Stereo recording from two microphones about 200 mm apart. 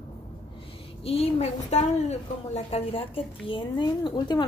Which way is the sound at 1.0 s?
30° left (ahead or behind).